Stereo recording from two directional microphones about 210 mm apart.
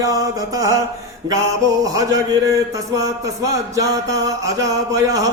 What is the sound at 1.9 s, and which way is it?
Mantra, 15° right (ahead or behind).